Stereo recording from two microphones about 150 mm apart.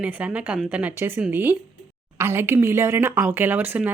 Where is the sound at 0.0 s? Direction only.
10° right (ahead or behind).